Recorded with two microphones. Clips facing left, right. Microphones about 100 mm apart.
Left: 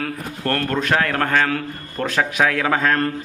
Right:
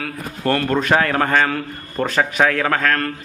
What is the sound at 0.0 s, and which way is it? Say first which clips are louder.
A man's voice: right 2 dB; centre (ahead or behind).